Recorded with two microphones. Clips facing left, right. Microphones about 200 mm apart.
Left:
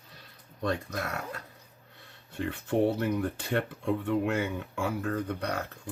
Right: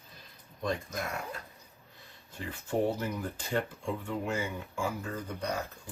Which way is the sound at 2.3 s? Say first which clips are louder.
Left 4 dB; 65° left (ahead or behind).